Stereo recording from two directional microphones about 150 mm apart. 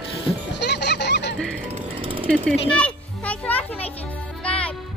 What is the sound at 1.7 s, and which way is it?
Jackhammer, 35° right (ahead or behind).